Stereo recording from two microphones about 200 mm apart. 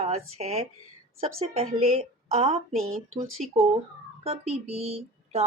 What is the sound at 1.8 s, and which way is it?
Speech, 30° right (ahead or behind).